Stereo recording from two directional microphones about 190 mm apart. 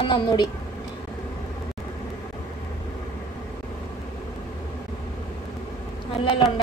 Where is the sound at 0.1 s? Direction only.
25° left (ahead or behind).